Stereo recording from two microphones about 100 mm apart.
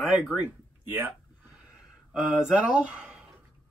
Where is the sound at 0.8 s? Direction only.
20° right (ahead or behind).